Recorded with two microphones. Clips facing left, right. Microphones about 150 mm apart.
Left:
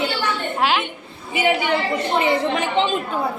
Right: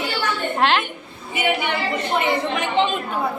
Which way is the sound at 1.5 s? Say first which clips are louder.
Left 2 dB; 30° left (ahead or behind).